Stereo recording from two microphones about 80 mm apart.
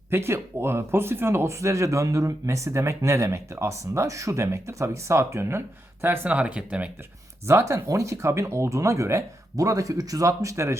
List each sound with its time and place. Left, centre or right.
0.1 s speech: right
6.2 s speech: centre
7.4 s speech: right